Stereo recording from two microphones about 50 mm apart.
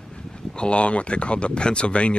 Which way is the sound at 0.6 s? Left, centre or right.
Left.